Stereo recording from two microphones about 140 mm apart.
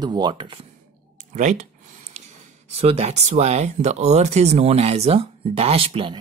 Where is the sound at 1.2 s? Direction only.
60° right (ahead or behind).